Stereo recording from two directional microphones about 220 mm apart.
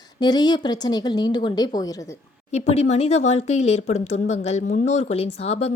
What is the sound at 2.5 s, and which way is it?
Speech, 30° left (ahead or behind).